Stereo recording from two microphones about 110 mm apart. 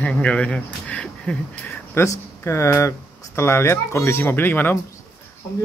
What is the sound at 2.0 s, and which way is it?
Speech, 25° left (ahead or behind).